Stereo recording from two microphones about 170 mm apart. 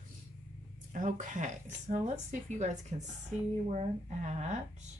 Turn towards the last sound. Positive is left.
turn(degrees=-45)  # may be behind; listen again after turning